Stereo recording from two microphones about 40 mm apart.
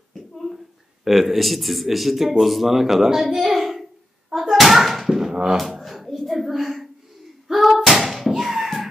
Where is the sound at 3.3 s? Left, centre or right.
Centre.